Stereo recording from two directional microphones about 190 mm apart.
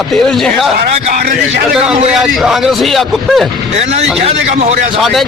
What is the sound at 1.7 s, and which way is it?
A man's voice, centre (ahead or behind).